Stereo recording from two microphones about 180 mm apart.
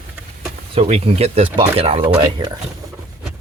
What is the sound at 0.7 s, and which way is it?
Speech, 35° right (ahead or behind).